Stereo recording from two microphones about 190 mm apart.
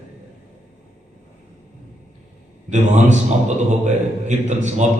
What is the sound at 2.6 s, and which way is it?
A man's voice, 40° right (ahead or behind).